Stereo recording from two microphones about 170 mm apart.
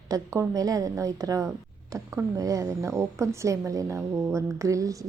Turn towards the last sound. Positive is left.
turn(degrees=-20)  # may be behind; listen again after turning